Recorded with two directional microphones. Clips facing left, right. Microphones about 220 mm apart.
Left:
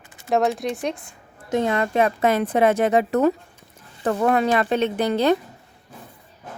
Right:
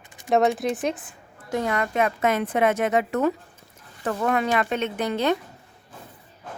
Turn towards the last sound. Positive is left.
turn(degrees=35)  # may be behind; listen again after turning